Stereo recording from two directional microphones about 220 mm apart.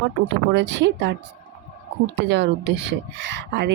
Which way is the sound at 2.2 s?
50° right (ahead or behind).